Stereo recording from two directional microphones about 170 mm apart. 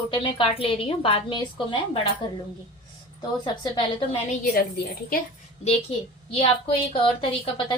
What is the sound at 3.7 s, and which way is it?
Speech, 30° left (ahead or behind).